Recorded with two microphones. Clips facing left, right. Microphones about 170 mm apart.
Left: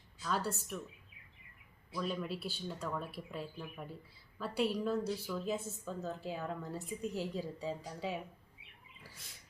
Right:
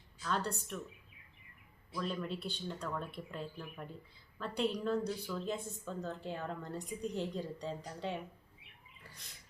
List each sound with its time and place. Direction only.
0.2 s a woman's voice: 5° left (ahead or behind)
2.0 s a woman's voice: 5° left (ahead or behind)